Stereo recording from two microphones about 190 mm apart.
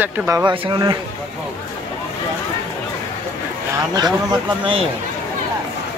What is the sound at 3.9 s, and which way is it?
Speech, 20° right (ahead or behind).